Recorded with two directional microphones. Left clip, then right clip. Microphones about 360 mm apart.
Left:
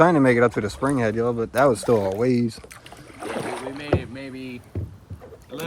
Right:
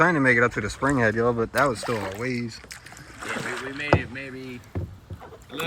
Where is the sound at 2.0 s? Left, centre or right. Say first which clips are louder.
Left 8 dB; centre.